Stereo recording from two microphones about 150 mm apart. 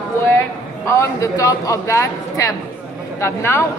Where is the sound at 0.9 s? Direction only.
20° left (ahead or behind).